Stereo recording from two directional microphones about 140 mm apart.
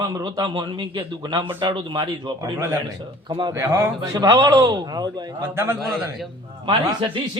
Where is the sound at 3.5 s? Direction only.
15° right (ahead or behind).